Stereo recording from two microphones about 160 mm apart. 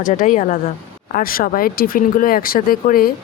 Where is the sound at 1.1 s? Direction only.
65° left (ahead or behind).